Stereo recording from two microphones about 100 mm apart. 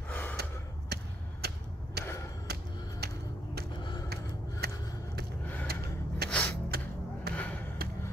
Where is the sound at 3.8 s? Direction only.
45° left (ahead or behind).